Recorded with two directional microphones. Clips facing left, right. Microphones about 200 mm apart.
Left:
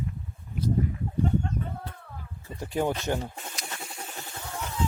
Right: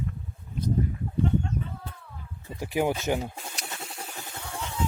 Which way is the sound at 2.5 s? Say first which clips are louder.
Right 1 dB; 5° right (ahead or behind).